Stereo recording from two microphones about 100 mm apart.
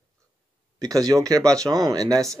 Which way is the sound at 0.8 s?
35° right (ahead or behind).